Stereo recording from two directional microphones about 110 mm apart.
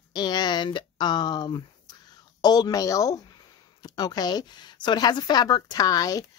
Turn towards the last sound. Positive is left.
turn(degrees=35)  # may be behind; listen again after turning